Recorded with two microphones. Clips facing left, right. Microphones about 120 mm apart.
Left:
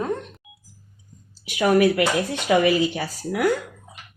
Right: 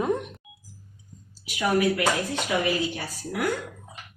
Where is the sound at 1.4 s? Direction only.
70° left (ahead or behind); by 3.0 s 90° left.